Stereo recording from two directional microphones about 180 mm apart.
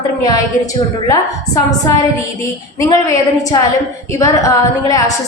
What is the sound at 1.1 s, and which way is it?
A woman's voice, 20° left (ahead or behind).